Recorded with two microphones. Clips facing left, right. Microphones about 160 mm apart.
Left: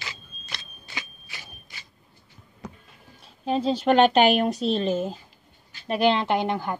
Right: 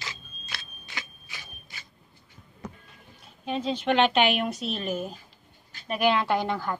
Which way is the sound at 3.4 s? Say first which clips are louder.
Left 5 dB; 35° left (ahead or behind).